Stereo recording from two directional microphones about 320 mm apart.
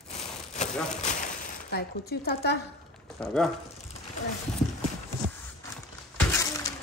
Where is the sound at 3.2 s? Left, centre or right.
Centre.